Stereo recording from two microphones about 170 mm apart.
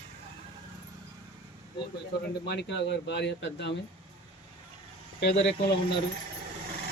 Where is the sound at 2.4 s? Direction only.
90° left.